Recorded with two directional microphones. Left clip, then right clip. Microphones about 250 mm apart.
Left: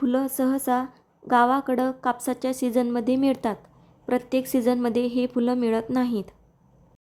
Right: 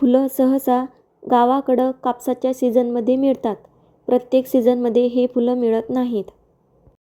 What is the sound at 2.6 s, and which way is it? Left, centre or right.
Speech, left.